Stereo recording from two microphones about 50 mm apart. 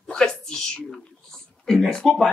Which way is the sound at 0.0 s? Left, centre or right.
Centre.